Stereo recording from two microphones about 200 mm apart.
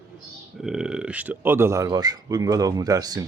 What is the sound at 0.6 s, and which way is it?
Speech, 5° right (ahead or behind).